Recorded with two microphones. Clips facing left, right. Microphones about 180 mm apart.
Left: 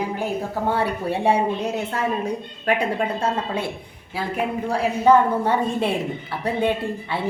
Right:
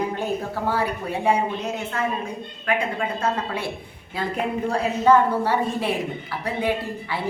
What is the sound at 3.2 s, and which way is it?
Speech, 25° left (ahead or behind).